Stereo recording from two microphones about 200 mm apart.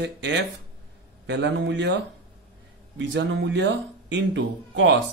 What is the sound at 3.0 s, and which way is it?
Speech, 65° right (ahead or behind).